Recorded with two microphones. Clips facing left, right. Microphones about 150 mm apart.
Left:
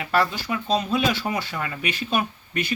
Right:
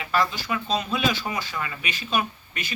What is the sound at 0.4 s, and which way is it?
Speech, 40° left (ahead or behind).